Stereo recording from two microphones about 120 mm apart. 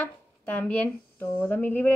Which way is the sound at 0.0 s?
10° left (ahead or behind).